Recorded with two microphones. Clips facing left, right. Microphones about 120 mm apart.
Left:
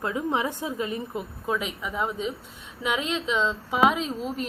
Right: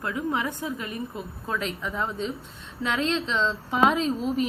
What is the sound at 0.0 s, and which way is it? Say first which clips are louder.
A woman's voice: left 1 dB; 20° left (ahead or behind).